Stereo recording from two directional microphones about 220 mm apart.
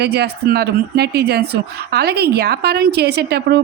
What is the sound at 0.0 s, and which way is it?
A woman's voice, 50° right (ahead or behind).